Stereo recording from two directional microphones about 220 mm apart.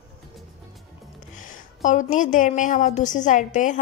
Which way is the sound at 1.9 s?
35° left (ahead or behind).